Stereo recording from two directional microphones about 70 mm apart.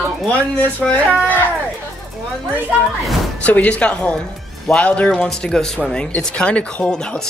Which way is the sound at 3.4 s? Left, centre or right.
Centre.